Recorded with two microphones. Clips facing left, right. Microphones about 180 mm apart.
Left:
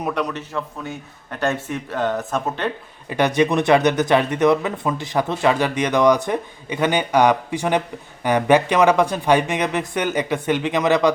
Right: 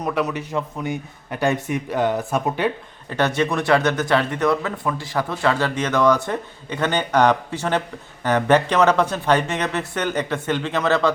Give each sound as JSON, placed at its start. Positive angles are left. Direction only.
{"t": 0.0, "sound": "a man's voice", "side_deg": -5}
{"t": 3.1, "sound": "speech", "side_deg": 15}